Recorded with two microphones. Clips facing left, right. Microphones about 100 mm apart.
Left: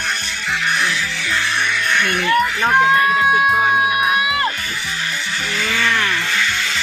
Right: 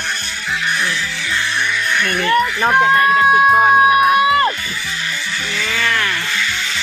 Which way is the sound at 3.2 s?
40° right (ahead or behind).